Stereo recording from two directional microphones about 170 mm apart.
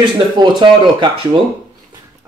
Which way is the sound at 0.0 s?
25° right (ahead or behind).